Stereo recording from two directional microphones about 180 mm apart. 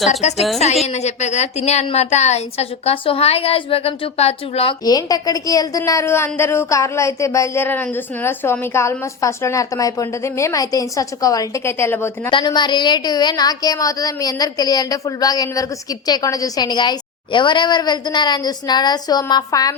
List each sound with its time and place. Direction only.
0.1 s a woman's voice: 35° left (ahead or behind)
4.9 s a woman's voice: 20° left (ahead or behind)
12.3 s a woman's voice: 25° left (ahead or behind)